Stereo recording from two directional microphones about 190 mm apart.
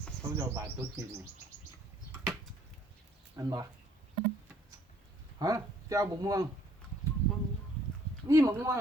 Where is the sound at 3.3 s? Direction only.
20° right (ahead or behind).